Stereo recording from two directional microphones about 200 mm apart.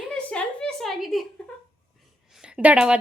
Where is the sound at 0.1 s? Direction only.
5° left (ahead or behind).